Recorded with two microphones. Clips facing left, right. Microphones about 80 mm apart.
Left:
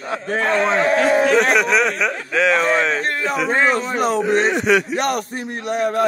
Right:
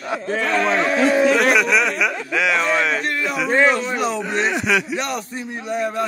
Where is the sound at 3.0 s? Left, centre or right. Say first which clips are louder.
Left 2 dB; left.